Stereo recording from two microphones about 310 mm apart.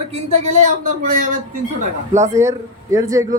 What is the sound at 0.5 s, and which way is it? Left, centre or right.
Speech, right.